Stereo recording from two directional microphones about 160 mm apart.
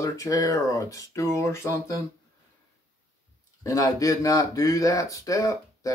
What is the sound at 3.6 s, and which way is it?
Speech, 20° left (ahead or behind).